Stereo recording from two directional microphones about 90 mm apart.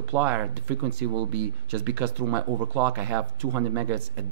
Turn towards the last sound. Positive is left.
turn(degrees=-20)  # may be behind; listen again after turning